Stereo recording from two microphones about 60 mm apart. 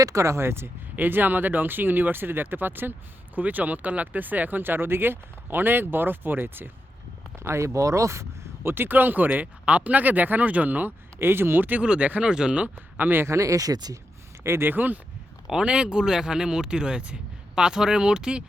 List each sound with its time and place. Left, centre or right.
0.0 s speech: right
0.9 s speech: right
7.3 s speech: right
8.6 s speech: right
11.2 s speech: right
11.8 s speech: centre
13.0 s speech: right
13.2 s speech: right
14.4 s speech: right
15.4 s speech: centre